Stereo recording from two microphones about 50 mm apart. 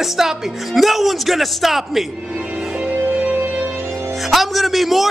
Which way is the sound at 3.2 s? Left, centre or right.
Right.